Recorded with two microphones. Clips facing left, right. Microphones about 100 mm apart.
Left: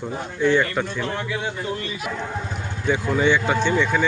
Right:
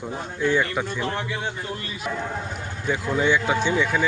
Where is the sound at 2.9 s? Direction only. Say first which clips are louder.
Left 2 dB; centre (ahead or behind).